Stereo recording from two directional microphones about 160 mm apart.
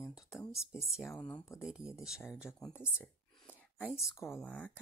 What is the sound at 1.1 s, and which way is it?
Speech, 10° left (ahead or behind).